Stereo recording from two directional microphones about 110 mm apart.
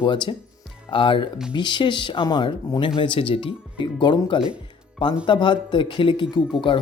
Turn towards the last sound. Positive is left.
turn(degrees=45)  # may be behind; listen again after turning